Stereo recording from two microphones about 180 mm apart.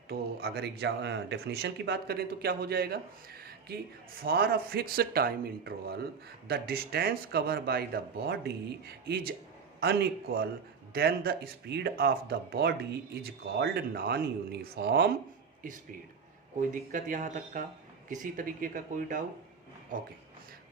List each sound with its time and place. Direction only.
0.1 s speech: 60° right (ahead or behind)
15.6 s speech: 45° right (ahead or behind)
16.9 s speech: 45° right (ahead or behind)